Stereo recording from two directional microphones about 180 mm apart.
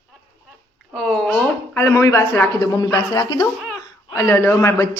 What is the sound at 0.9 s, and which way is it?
A woman's voice, 5° left (ahead or behind).